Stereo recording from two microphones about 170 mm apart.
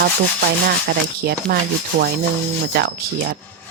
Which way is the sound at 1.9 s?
90° right.